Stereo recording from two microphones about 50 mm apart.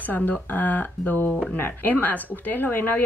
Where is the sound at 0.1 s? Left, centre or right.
Left.